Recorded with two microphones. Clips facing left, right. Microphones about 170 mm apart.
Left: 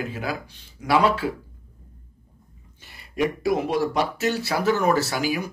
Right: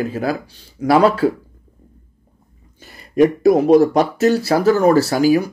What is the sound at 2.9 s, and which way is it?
Speech, 40° right (ahead or behind).